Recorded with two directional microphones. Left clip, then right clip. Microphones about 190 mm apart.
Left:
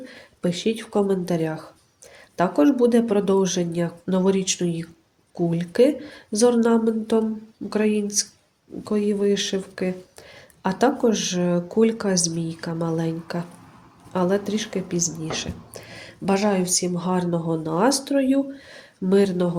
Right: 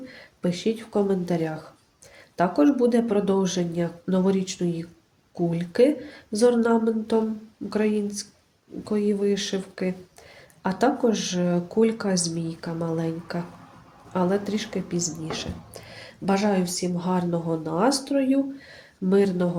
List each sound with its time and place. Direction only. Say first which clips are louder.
0.1 s speech: left 2 dB; 15° left (ahead or behind)